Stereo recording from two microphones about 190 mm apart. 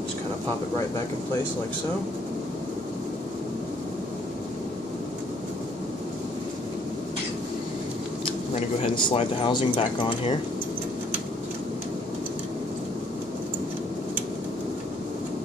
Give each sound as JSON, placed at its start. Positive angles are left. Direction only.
{"t": 8.3, "sound": "speech", "side_deg": 30}